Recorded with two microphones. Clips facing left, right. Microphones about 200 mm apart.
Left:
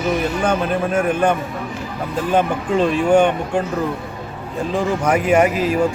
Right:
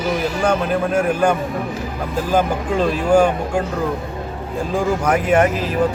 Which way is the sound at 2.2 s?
5° right (ahead or behind).